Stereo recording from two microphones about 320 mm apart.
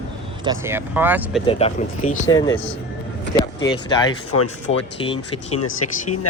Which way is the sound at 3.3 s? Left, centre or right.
Centre.